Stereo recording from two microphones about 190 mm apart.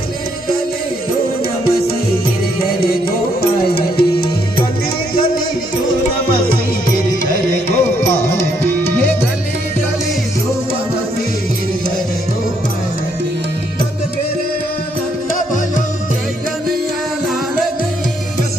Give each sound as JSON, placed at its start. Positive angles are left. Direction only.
{"t": 2.6, "sound": "music", "side_deg": 50}
{"t": 7.3, "sound": "music", "side_deg": 40}